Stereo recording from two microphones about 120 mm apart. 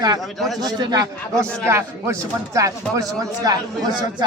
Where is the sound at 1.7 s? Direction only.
25° right (ahead or behind).